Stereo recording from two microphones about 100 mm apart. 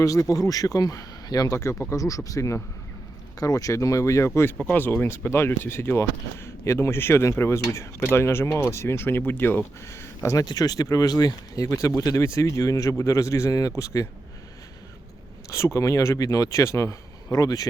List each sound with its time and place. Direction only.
0.0 s speech: 35° left (ahead or behind)
10.4 s speech: 40° left (ahead or behind)
15.4 s speech: 30° left (ahead or behind)